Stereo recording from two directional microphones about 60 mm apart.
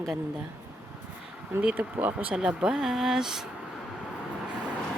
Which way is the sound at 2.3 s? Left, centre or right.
Centre.